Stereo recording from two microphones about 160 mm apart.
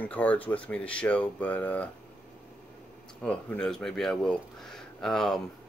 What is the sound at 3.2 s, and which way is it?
Speech, 5° left (ahead or behind).